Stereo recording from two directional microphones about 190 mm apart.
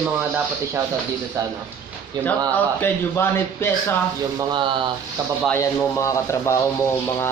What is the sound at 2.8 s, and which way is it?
Speech, 10° left (ahead or behind).